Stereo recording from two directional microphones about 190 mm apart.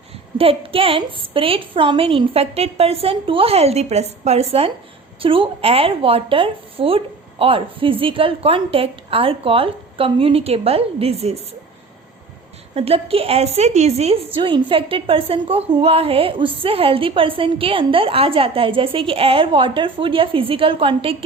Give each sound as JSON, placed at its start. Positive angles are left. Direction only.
{"t": 0.3, "sound": "a woman's voice", "side_deg": -30}
{"t": 12.7, "sound": "a woman's voice", "side_deg": -30}